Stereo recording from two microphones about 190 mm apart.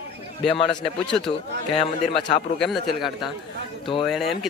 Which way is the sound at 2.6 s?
Centre (ahead or behind).